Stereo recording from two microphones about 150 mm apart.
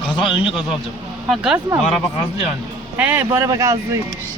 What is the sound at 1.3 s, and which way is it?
Speech, 5° right (ahead or behind).